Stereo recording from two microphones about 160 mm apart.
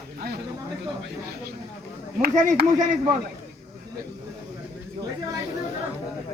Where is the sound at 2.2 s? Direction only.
60° right (ahead or behind).